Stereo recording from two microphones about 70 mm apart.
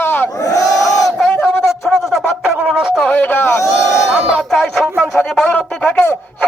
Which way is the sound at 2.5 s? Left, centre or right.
Centre.